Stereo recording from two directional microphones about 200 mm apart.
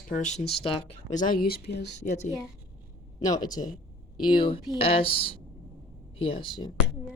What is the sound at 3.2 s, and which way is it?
Speech, 20° left (ahead or behind).